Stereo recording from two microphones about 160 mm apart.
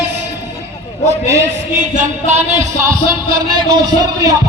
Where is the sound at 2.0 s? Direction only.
45° right (ahead or behind).